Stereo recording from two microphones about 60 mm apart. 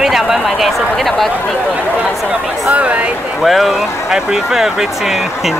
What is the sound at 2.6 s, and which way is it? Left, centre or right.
Speech, right.